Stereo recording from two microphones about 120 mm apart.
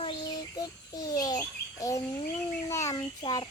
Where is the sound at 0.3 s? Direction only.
30° left (ahead or behind).